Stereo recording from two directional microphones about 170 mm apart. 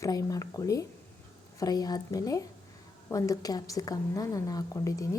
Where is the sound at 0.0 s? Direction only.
20° left (ahead or behind).